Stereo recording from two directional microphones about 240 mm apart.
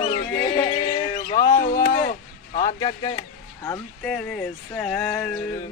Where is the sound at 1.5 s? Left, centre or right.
Left; by 3.2 s centre.